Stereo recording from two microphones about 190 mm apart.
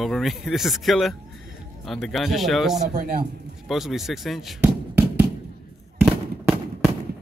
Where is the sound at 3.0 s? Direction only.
50° right (ahead or behind).